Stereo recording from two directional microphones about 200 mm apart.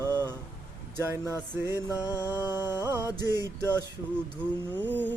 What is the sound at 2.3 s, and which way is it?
Mantra, 10° right (ahead or behind).